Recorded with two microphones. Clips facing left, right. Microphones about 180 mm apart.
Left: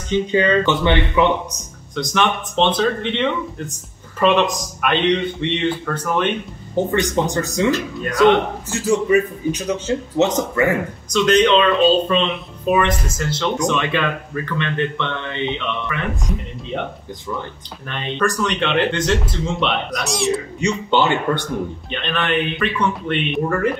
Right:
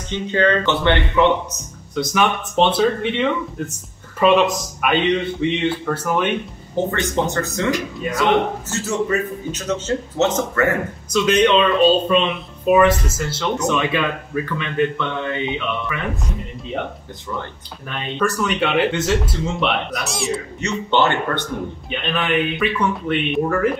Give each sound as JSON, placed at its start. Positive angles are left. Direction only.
{"t": 0.1, "sound": "a man's voice", "side_deg": 15}
{"t": 2.0, "sound": "a man's voice", "side_deg": -5}
{"t": 6.9, "sound": "a man's voice", "side_deg": 15}
{"t": 7.7, "sound": "speech", "side_deg": -5}
{"t": 8.6, "sound": "a man's voice", "side_deg": 15}
{"t": 11.1, "sound": "a man's voice", "side_deg": -5}
{"t": 17.8, "sound": "speech", "side_deg": -5}
{"t": 20.6, "sound": "a man's voice", "side_deg": 15}
{"t": 21.9, "sound": "speech", "side_deg": -5}